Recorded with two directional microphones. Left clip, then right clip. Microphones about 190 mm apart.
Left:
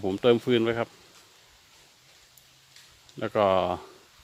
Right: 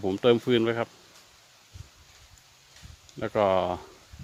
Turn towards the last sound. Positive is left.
turn(degrees=10)  # may be behind; listen again after turning